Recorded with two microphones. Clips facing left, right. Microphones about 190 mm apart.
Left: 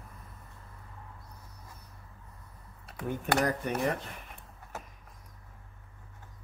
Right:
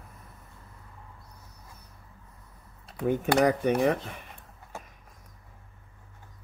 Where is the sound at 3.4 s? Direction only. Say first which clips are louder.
Right 9 dB; 75° right (ahead or behind).